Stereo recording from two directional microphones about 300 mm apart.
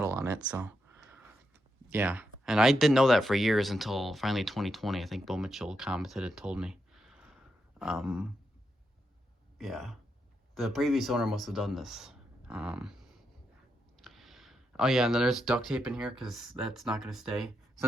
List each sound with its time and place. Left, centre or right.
0.0 s a sound: centre
1.9 s speech: centre
9.6 s speech: centre
14.0 s speech: centre